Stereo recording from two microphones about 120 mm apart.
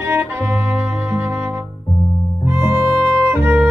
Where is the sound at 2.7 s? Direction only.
30° left (ahead or behind).